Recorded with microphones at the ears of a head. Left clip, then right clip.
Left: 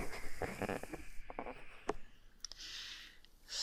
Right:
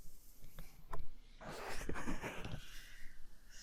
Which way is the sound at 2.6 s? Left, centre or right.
Left.